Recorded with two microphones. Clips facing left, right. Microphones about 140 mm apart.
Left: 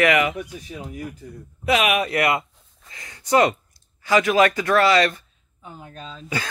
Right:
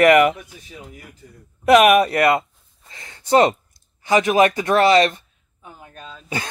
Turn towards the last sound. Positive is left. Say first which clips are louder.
# left 1 dB
turn(degrees=-10)  # may be behind; listen again after turning